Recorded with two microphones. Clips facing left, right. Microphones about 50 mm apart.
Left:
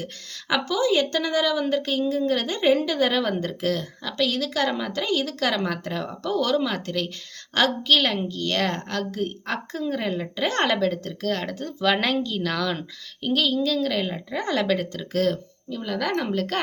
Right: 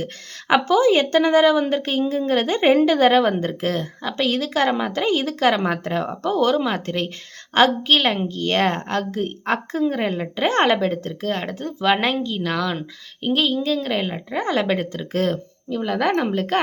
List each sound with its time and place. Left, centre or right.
0.0 s a woman's voice: right; by 12.8 s centre
13.2 s a woman's voice: right